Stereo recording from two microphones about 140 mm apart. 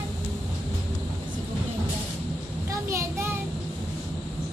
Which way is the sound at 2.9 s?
20° right (ahead or behind).